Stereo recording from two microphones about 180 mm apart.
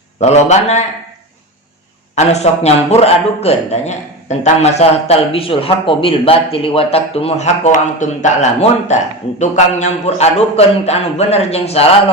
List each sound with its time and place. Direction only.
0.2 s a man's voice: 40° left (ahead or behind)
2.1 s a man's voice: 35° left (ahead or behind)